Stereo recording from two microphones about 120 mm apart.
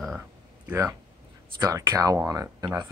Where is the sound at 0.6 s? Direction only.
20° right (ahead or behind).